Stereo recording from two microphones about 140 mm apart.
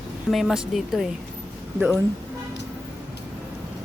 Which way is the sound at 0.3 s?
Centre (ahead or behind).